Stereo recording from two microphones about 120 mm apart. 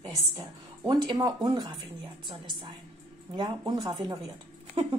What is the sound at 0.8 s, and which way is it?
Speech, 35° right (ahead or behind).